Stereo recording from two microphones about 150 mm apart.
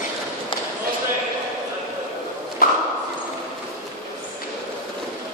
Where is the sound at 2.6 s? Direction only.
75° left (ahead or behind).